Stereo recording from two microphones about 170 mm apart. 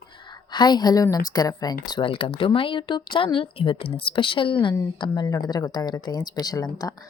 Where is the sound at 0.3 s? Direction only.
25° left (ahead or behind).